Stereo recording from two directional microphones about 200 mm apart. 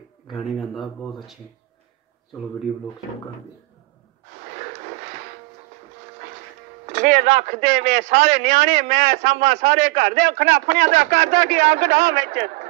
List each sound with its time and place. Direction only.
0.3 s speech: centre (ahead or behind)
4.3 s a sound: 40° right (ahead or behind)
6.9 s speech: 35° right (ahead or behind)